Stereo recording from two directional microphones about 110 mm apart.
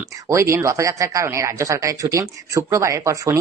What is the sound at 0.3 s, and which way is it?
Speech, 25° right (ahead or behind).